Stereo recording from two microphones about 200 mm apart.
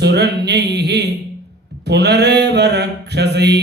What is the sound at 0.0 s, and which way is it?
Mantra, 55° right (ahead or behind).